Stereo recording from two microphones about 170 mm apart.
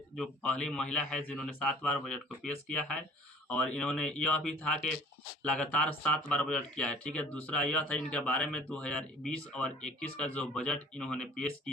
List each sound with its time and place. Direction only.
0.2 s a man's voice: 5° left (ahead or behind)